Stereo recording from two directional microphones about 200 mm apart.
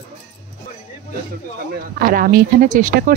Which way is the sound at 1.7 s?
45° right (ahead or behind).